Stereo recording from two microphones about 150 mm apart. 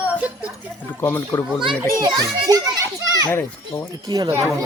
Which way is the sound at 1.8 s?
20° right (ahead or behind).